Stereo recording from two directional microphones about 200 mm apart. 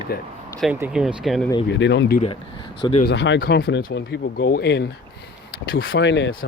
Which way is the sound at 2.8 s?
25° left (ahead or behind).